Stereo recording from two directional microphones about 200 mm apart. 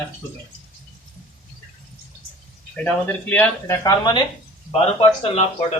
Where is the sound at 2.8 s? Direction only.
10° left (ahead or behind).